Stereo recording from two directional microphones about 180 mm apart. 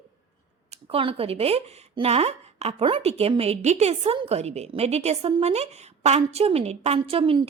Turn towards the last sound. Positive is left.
turn(degrees=-30)  # may be behind; listen again after turning